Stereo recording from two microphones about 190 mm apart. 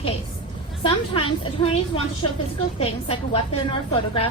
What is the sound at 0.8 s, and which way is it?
A woman's voice, 30° left (ahead or behind).